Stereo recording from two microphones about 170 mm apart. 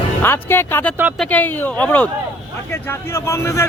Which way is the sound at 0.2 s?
15° left (ahead or behind).